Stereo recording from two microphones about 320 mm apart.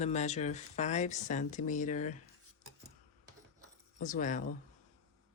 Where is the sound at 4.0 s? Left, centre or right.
Left.